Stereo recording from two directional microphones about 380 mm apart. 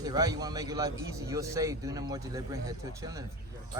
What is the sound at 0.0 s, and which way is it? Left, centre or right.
A man's voice, centre.